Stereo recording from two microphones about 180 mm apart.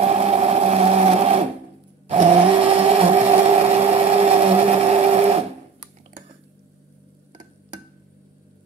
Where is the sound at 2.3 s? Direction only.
30° right (ahead or behind).